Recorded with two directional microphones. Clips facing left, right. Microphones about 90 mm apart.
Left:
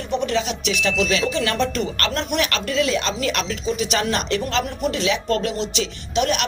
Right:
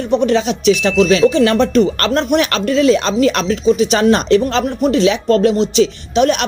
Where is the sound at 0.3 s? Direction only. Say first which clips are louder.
Right 10 dB; 30° right (ahead or behind).